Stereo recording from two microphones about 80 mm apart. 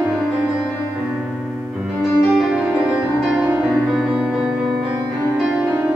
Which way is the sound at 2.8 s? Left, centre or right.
Centre.